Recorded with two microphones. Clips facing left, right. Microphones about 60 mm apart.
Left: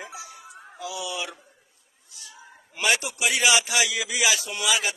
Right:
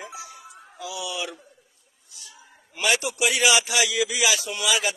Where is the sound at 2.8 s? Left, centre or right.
Centre.